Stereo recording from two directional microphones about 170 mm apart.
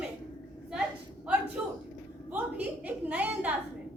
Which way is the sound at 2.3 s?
10° right (ahead or behind).